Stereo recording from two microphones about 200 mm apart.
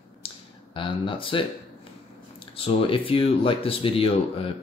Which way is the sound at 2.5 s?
25° left (ahead or behind).